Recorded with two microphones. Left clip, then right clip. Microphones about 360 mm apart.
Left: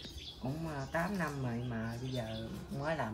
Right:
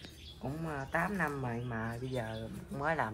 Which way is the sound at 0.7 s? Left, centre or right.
Centre.